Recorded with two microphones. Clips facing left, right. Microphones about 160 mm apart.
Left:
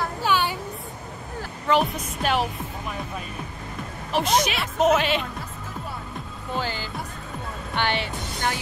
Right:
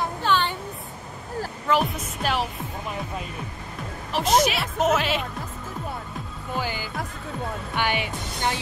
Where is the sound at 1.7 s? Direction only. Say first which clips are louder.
Left 2 dB; centre (ahead or behind).